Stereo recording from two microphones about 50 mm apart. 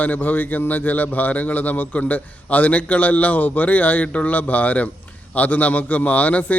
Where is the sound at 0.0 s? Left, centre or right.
Left.